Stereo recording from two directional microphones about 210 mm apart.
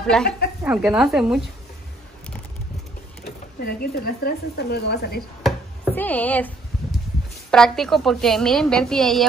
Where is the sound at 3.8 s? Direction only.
45° left (ahead or behind).